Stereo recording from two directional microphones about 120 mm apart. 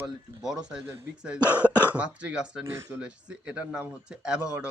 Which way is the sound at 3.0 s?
10° right (ahead or behind).